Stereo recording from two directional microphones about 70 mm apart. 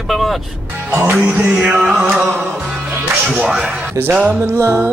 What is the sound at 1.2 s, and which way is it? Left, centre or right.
Music, centre.